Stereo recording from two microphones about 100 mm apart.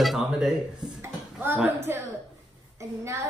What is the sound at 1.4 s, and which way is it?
Speech, 20° right (ahead or behind).